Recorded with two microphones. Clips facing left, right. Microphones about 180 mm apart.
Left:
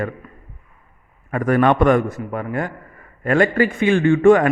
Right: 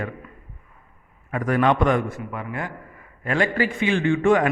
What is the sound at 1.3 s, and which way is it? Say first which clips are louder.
A man's voice: left 4 dB; 50° left (ahead or behind).